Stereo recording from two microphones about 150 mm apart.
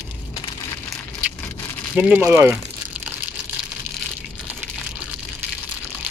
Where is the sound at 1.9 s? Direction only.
10° right (ahead or behind).